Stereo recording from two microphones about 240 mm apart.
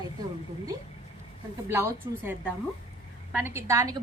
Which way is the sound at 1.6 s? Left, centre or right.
Centre.